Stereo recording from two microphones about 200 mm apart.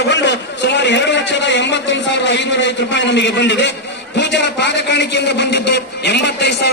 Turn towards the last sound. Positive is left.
turn(degrees=60)  # may be behind; listen again after turning